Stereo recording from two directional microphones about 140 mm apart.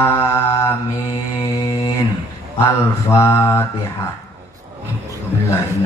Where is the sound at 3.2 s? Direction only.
20° left (ahead or behind).